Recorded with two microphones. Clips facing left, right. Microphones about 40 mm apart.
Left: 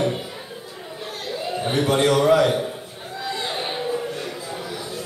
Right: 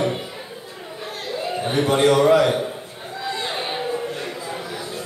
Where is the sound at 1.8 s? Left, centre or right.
Centre.